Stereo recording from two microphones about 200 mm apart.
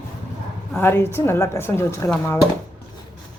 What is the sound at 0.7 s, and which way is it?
Speech, 10° left (ahead or behind).